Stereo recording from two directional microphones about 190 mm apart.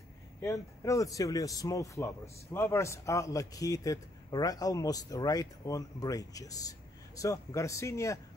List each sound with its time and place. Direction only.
0.4 s a man's voice: 15° left (ahead or behind)